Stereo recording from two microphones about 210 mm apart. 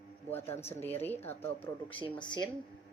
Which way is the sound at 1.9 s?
20° left (ahead or behind).